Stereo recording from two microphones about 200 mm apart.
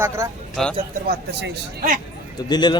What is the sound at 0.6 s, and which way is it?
Speech, centre (ahead or behind).